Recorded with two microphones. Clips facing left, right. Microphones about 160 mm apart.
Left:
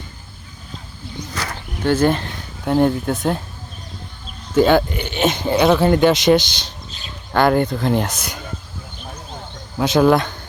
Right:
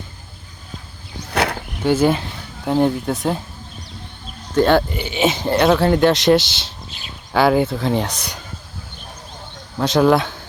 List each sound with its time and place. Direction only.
1.3 s a sound: 65° right (ahead or behind)
1.8 s speech: 10° right (ahead or behind)
4.5 s speech: centre (ahead or behind)
9.7 s speech: centre (ahead or behind)